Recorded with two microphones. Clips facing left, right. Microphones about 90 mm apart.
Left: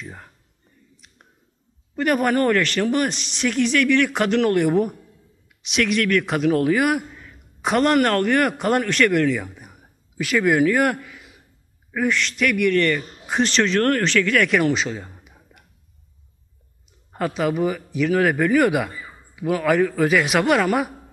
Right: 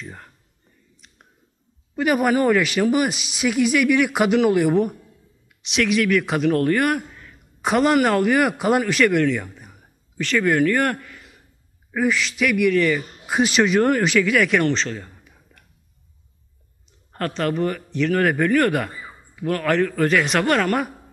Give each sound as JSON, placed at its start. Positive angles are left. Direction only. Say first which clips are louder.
{"t": 0.0, "sound": "speech", "louder": "even", "side_deg": 5}
{"t": 0.9, "sound": "a sound", "louder": "even", "side_deg": 0}
{"t": 2.0, "sound": "a man's voice", "louder": "right 1 dB", "side_deg": -5}
{"t": 17.1, "sound": "speech", "louder": "left 1 dB", "side_deg": 5}